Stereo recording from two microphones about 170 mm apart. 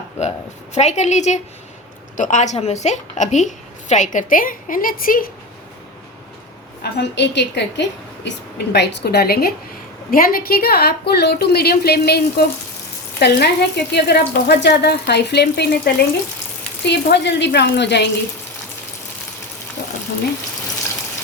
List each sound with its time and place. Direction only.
0.2 s a woman's voice: 40° left (ahead or behind); by 5.3 s 55° left (ahead or behind)
6.9 s a woman's voice: 90° left